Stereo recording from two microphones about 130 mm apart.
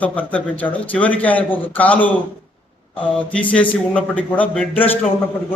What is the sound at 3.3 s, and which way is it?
Speech, 10° left (ahead or behind).